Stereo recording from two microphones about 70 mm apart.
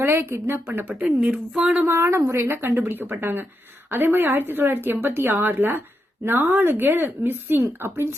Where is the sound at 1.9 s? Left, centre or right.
Right.